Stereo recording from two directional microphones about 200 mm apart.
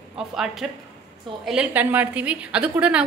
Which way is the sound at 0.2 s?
5° right (ahead or behind).